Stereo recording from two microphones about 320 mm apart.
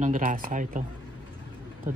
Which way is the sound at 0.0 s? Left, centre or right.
Right.